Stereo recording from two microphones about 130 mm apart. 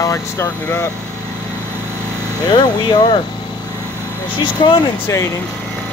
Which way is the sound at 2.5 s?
35° left (ahead or behind).